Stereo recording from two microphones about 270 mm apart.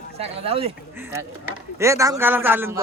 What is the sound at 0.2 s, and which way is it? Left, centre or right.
Speech, right.